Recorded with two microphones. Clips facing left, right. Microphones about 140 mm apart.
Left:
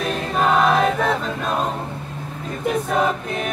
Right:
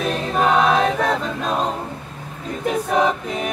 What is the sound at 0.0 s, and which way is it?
Choir, centre (ahead or behind).